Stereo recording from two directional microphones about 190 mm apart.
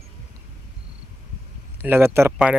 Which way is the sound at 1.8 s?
10° right (ahead or behind).